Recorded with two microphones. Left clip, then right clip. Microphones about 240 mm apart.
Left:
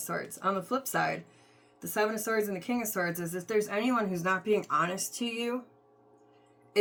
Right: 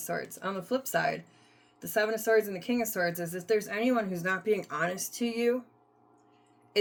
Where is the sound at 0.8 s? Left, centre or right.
Centre.